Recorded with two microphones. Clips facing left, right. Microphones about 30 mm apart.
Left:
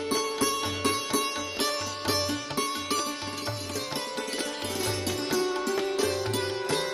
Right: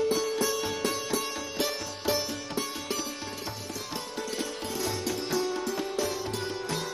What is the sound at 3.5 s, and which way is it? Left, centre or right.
Music, left.